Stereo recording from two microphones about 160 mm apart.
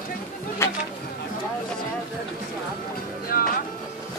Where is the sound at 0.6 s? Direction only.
15° left (ahead or behind).